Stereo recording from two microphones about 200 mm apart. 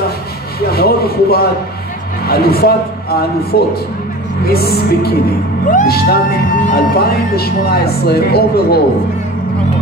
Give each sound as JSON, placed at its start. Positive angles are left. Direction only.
{"t": 0.7, "sound": "speech", "side_deg": 50}